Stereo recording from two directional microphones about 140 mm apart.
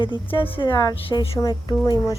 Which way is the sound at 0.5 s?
30° left (ahead or behind).